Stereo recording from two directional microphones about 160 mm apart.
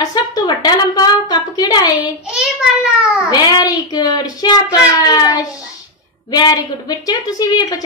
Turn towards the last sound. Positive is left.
turn(degrees=25)  # may be behind; listen again after turning